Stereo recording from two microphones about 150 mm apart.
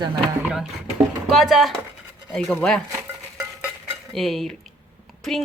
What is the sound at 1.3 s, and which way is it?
Speech, centre (ahead or behind).